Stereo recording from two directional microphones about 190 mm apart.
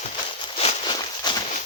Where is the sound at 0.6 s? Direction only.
30° left (ahead or behind).